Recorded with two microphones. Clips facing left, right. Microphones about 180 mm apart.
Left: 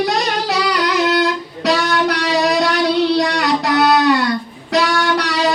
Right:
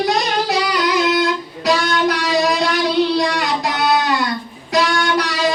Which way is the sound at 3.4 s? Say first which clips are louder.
Left 4 dB; 65° left (ahead or behind).